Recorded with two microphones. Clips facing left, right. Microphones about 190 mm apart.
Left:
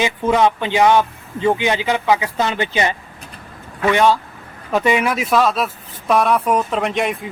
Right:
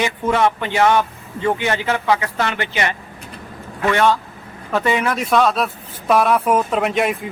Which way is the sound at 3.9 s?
15° left (ahead or behind).